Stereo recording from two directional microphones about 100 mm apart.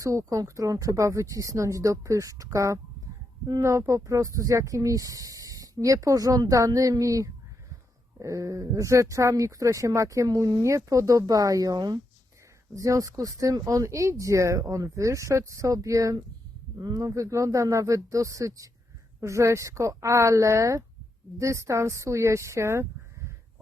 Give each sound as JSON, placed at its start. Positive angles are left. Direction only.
{"t": 0.0, "sound": "speech", "side_deg": -30}